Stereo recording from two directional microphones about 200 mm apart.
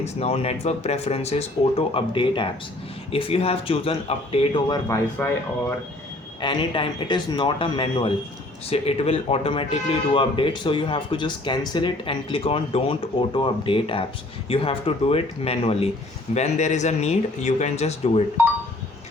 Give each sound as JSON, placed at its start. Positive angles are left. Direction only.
{"t": 0.0, "sound": "a man's voice", "side_deg": 30}
{"t": 5.2, "sound": "speech", "side_deg": 5}
{"t": 6.4, "sound": "a man's voice", "side_deg": 25}